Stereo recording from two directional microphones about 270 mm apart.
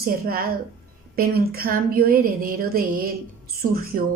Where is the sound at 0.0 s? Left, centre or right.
Right.